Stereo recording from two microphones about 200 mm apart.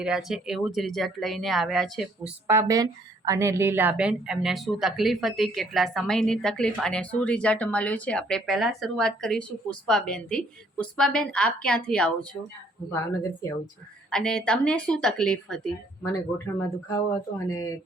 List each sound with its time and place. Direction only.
0.0 s a woman's voice: 5° right (ahead or behind)
2.5 s a woman's voice: 15° right (ahead or behind); by 12.5 s 5° left (ahead or behind)
14.1 s a woman's voice: 5° left (ahead or behind)
16.6 s speech: 15° left (ahead or behind)